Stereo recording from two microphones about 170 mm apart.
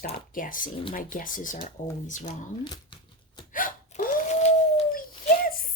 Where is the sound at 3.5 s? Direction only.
55° left (ahead or behind).